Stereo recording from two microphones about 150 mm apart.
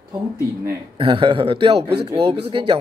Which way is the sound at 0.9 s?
35° right (ahead or behind).